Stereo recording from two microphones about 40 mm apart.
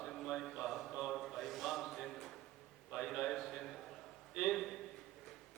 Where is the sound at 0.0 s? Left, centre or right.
Centre.